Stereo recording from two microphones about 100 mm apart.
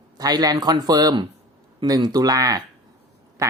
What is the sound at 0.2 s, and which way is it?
Speech, 40° right (ahead or behind).